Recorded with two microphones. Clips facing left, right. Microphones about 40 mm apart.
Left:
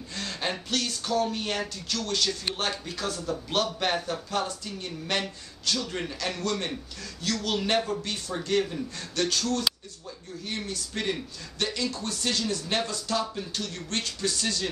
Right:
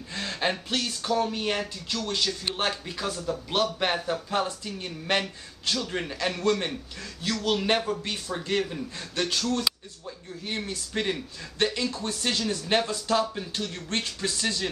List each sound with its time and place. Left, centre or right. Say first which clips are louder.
0.1 s a man's voice: right 3 dB; right